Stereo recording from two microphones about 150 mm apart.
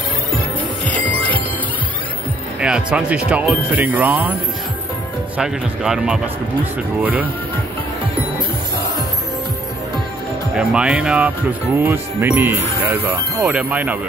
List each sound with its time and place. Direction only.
0.8 s music: 10° left (ahead or behind)
2.6 s speech: 5° right (ahead or behind)
5.4 s speech: 5° right (ahead or behind)
10.5 s speech: 5° right (ahead or behind)
13.5 s speech: 10° right (ahead or behind)